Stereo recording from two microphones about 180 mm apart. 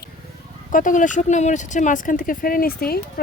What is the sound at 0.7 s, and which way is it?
Speech, 45° left (ahead or behind).